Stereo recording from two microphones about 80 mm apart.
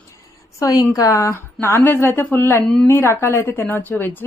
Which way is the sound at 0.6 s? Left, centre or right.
Left.